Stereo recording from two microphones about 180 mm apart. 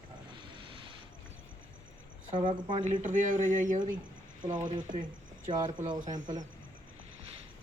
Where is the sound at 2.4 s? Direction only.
25° right (ahead or behind).